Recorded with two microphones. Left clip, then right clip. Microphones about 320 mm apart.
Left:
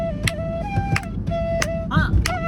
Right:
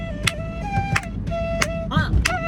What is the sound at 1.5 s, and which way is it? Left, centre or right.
Music, centre.